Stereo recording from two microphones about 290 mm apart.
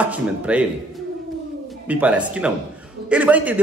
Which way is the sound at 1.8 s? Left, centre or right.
Centre.